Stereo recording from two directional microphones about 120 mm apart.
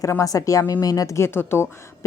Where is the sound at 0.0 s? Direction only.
30° left (ahead or behind).